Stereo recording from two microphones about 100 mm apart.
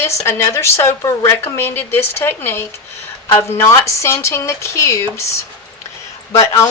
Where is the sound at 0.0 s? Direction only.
30° left (ahead or behind).